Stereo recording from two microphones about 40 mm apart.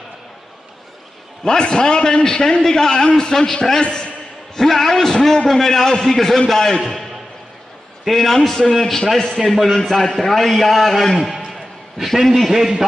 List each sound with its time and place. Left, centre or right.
1.4 s a man's voice: centre
8.0 s a man's voice: centre
11.1 s a sound: centre
12.2 s a man's voice: centre